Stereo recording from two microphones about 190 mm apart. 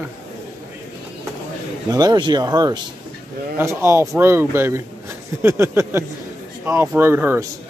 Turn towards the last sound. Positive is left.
turn(degrees=-10)  # may be behind; listen again after turning